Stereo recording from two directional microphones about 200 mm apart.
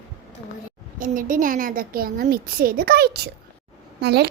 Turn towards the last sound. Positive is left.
turn(degrees=-55)  # may be behind; listen again after turning